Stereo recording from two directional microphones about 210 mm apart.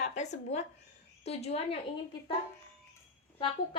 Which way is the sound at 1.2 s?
30° left (ahead or behind).